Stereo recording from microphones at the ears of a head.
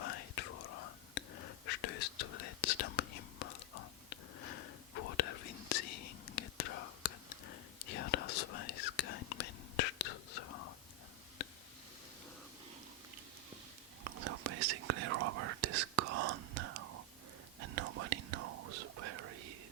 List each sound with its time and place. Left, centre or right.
0.0 s whispering: left
14.0 s whispering: right